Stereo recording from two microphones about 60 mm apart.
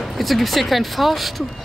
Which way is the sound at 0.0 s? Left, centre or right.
Centre.